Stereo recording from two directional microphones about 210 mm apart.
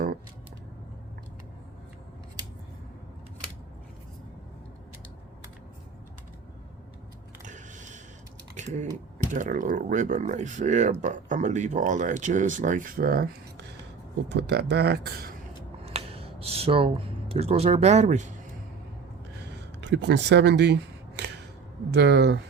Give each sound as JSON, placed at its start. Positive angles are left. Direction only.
{"t": 7.4, "sound": "a sound", "side_deg": -35}
{"t": 8.6, "sound": "typing", "side_deg": -35}
{"t": 9.1, "sound": "speech", "side_deg": -40}
{"t": 15.8, "sound": "a sound", "side_deg": -30}
{"t": 17.3, "sound": "speech", "side_deg": -30}
{"t": 19.8, "sound": "speech", "side_deg": -55}
{"t": 21.9, "sound": "speech", "side_deg": -55}